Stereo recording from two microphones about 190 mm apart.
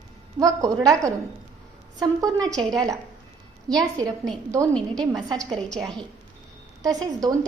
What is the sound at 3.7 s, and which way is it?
Speech, 5° left (ahead or behind).